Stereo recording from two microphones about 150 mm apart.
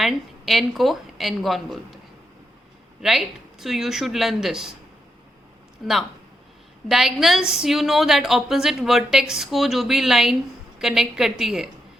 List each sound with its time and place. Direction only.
0.0 s a woman's voice: centre (ahead or behind)
3.0 s a woman's voice: centre (ahead or behind)
5.8 s a woman's voice: centre (ahead or behind)